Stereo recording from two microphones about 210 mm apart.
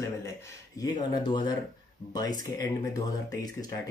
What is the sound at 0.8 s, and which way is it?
Speech, 20° left (ahead or behind).